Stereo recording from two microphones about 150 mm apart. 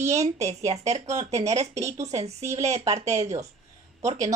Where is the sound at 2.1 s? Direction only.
45° right (ahead or behind).